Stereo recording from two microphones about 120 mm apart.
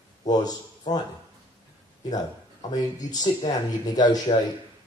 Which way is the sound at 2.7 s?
35° left (ahead or behind).